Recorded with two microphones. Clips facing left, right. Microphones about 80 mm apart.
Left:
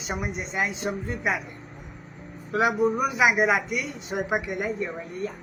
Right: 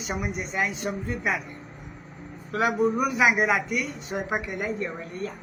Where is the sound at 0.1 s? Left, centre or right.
Left.